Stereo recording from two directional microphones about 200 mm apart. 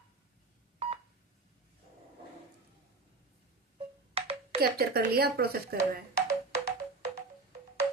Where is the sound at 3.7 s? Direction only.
30° right (ahead or behind).